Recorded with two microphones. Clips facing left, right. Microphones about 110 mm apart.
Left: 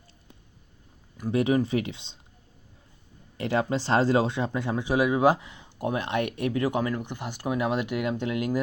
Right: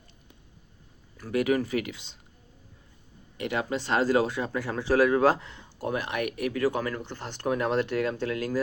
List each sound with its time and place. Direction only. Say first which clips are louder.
1.1 s speech: left 2 dB; 25° left (ahead or behind)
3.3 s speech: left 3 dB; 30° left (ahead or behind)